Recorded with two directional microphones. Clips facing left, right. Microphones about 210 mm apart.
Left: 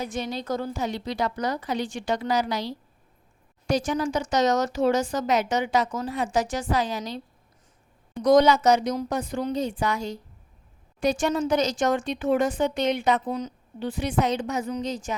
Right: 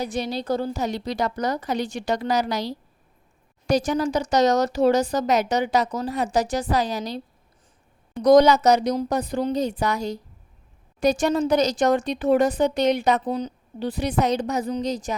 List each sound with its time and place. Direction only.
0.0 s speech: 35° right (ahead or behind)
8.2 s speech: 40° right (ahead or behind)